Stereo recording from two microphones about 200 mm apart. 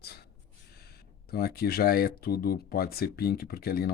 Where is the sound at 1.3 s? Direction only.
50° left (ahead or behind).